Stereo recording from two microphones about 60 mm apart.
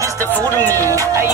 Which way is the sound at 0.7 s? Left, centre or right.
Right.